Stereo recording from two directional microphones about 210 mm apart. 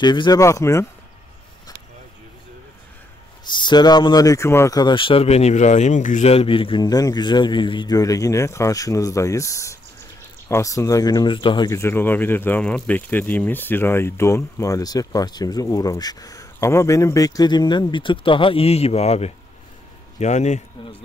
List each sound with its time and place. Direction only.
0.0 s speech: 20° left (ahead or behind)
3.4 s speech: 20° left (ahead or behind)